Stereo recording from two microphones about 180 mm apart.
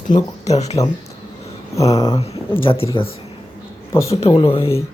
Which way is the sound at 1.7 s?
20° left (ahead or behind).